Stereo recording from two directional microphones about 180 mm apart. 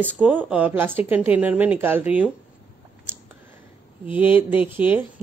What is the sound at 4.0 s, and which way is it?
A woman's voice, 10° right (ahead or behind).